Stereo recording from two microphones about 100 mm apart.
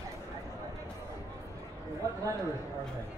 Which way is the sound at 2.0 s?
35° right (ahead or behind).